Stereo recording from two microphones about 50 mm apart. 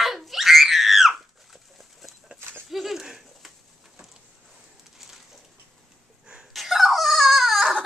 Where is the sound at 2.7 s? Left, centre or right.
Centre.